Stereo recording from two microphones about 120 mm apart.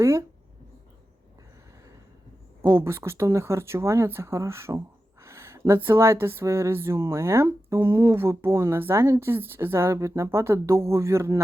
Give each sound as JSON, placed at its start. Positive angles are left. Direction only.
{"t": 0.0, "sound": "speech", "side_deg": -25}
{"t": 2.6, "sound": "speech", "side_deg": -20}